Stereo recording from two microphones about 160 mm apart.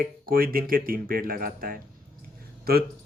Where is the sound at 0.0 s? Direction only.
65° right (ahead or behind).